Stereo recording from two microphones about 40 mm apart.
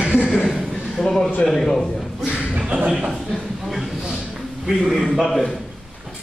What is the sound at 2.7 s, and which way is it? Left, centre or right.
Speech, right.